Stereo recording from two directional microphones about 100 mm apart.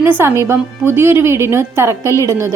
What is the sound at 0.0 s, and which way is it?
A woman's voice, 20° right (ahead or behind).